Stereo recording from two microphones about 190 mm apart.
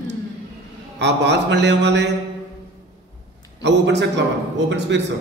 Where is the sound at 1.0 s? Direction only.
65° right (ahead or behind).